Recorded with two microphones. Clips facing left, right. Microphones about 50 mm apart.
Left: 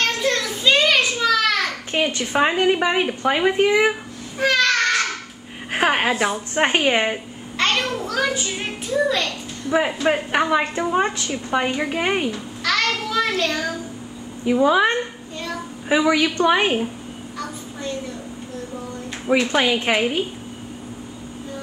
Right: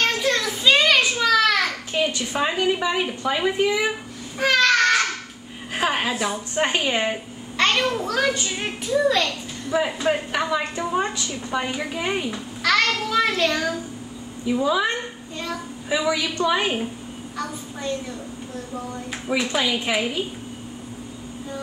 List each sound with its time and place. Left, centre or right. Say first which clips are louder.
0.2 s a sound: even; centre
1.9 s a child's voice: left 2 dB; left
4.4 s a sound: even; centre
5.7 s a woman's voice: left 4 dB; left
7.5 s a child's voice: right 1 dB; centre
9.7 s a woman's voice: left 3 dB; left
12.3 s babbling: right 1 dB; centre
13.1 s a child's voice: right 1 dB; centre
14.4 s a woman's voice: left 5 dB; left
19.5 s a woman's voice: left 4 dB; left